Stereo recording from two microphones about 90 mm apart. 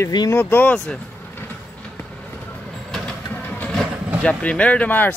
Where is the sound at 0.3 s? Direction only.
25° left (ahead or behind).